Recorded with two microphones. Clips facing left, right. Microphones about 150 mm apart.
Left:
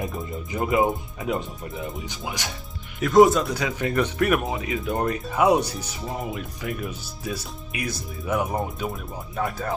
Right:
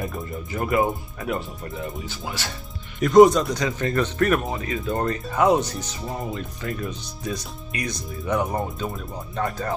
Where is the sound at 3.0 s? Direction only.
Centre (ahead or behind).